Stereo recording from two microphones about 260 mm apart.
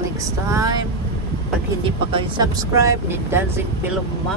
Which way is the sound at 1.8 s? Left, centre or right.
Centre.